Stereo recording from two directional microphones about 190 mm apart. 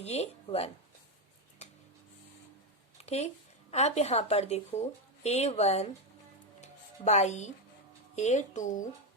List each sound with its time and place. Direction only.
0.0 s speech: 35° left (ahead or behind)
3.0 s a woman's voice: 35° left (ahead or behind)
6.6 s music: 35° left (ahead or behind)
8.1 s speech: 35° left (ahead or behind)